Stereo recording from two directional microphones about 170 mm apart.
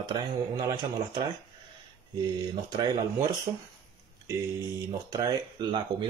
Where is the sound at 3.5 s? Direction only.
30° right (ahead or behind).